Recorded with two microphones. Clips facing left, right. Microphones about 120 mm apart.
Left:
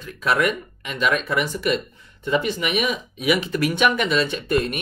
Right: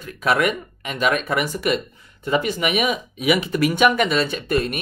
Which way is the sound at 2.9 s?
5° right (ahead or behind).